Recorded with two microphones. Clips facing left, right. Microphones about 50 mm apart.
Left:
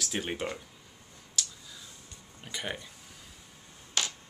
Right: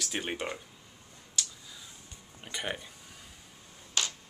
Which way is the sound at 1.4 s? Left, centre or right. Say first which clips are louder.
Even; centre.